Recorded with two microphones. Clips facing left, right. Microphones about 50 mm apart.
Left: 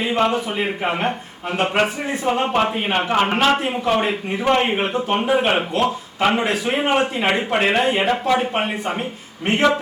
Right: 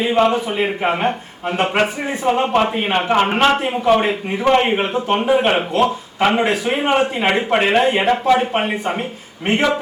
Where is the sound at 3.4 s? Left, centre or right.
Centre.